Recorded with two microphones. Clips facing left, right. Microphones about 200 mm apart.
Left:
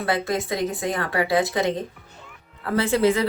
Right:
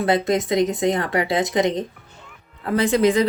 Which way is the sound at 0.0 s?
20° right (ahead or behind).